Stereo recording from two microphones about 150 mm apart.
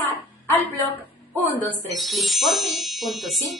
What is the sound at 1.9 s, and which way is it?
Speech, centre (ahead or behind).